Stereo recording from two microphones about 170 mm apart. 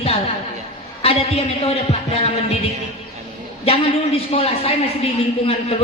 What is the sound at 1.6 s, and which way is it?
Speech, 40° left (ahead or behind).